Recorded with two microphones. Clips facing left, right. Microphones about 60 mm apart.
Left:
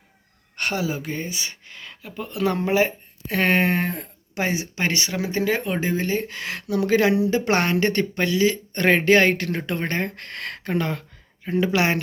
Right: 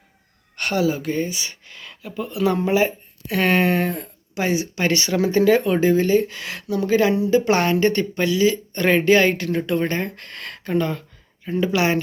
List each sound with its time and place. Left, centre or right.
0.5 s speech: left
6.7 s speech: left